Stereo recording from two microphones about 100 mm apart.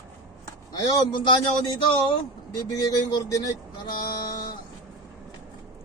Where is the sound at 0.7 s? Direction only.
45° left (ahead or behind).